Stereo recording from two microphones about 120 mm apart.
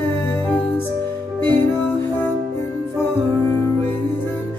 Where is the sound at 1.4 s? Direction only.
15° left (ahead or behind).